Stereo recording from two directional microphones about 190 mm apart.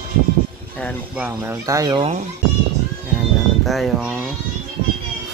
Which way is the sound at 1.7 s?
20° right (ahead or behind).